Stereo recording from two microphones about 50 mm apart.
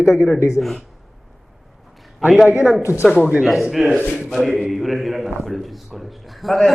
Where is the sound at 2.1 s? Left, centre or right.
Centre.